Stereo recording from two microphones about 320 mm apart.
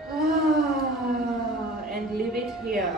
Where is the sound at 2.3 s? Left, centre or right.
Centre.